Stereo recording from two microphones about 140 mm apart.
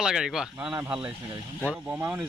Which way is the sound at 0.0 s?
5° right (ahead or behind).